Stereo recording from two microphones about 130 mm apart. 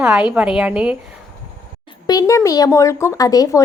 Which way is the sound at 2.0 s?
30° left (ahead or behind).